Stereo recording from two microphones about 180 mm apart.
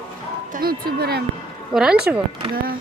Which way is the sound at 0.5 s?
55° right (ahead or behind).